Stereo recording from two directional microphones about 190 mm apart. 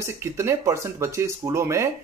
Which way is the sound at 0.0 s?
15° right (ahead or behind).